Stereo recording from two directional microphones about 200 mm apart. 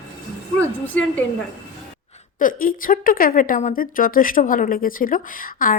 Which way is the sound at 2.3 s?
45° left (ahead or behind).